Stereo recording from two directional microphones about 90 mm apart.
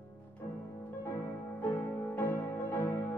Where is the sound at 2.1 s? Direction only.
20° left (ahead or behind).